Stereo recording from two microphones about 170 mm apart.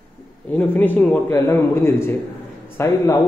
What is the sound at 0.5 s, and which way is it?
A man's voice, 10° left (ahead or behind).